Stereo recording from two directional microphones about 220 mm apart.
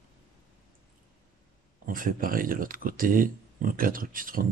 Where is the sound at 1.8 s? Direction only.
40° right (ahead or behind).